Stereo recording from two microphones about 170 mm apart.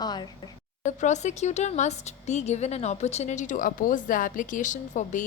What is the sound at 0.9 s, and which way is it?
Speech, 45° left (ahead or behind).